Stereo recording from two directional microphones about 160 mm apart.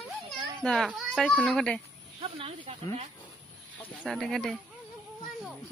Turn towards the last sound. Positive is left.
turn(degrees=5)  # may be behind; listen again after turning